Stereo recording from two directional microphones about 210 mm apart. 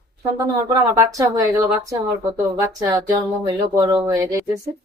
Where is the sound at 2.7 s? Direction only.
20° right (ahead or behind).